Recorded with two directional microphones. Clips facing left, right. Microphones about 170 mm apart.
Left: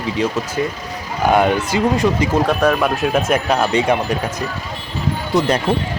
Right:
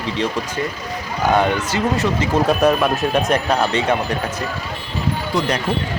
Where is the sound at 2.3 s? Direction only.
5° right (ahead or behind); by 4.2 s 10° left (ahead or behind).